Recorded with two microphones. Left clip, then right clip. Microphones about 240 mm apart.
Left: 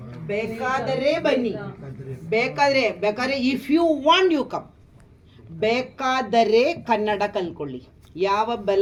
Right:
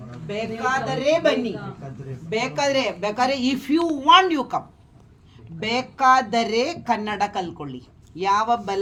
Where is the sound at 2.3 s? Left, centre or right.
Centre.